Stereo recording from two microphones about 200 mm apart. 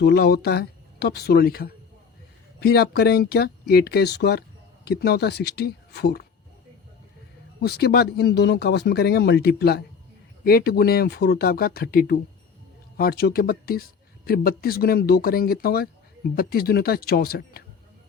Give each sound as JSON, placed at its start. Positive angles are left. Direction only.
{"t": 0.0, "sound": "speech", "side_deg": 55}
{"t": 7.6, "sound": "speech", "side_deg": 55}